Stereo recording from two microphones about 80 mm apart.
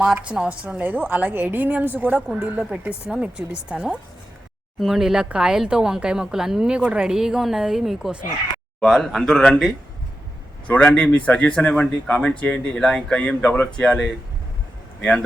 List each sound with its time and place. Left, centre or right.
0.0 s a woman's voice: centre